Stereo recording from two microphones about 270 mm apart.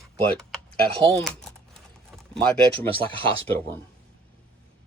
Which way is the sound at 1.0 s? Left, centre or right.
Centre.